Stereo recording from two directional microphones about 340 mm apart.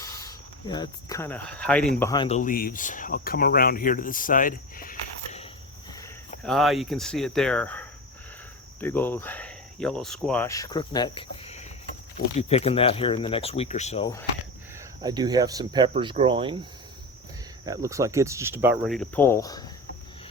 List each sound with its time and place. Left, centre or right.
0.0 s speech: centre
6.0 s speech: centre
15.0 s speech: centre
17.7 s speech: centre